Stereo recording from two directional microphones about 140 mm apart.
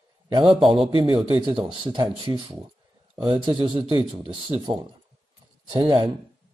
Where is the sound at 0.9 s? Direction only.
35° right (ahead or behind).